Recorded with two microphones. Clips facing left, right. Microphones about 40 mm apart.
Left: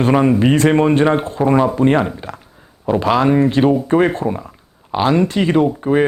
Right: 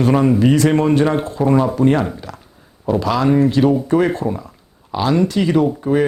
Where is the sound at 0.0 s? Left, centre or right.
Left.